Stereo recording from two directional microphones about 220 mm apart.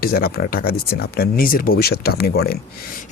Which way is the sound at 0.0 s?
45° left (ahead or behind).